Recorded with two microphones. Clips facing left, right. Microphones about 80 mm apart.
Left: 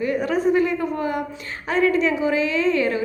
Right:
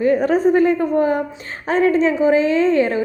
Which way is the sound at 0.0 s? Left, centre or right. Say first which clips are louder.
Right 6 dB; right.